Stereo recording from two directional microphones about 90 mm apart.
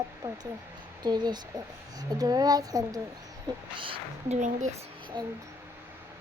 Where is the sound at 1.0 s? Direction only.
55° right (ahead or behind).